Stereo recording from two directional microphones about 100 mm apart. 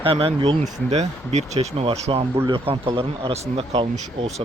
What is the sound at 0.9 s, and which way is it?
Speech, 90° right.